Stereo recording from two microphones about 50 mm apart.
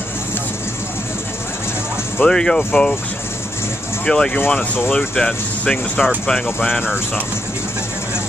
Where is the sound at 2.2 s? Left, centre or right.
Centre.